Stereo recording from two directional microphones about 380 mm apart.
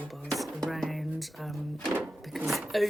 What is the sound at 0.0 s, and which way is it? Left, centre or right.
Music, centre.